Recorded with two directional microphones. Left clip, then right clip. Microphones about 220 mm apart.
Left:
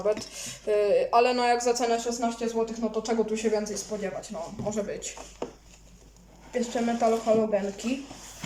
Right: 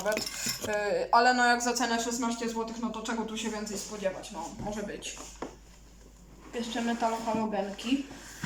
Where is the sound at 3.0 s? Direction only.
25° left (ahead or behind).